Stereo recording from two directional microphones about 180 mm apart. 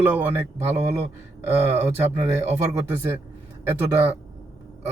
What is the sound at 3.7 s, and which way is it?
Speech, 10° right (ahead or behind).